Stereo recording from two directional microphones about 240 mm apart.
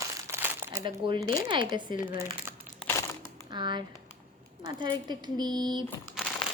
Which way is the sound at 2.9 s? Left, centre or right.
Centre.